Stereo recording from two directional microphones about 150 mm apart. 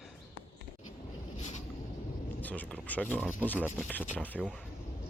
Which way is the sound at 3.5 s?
10° left (ahead or behind).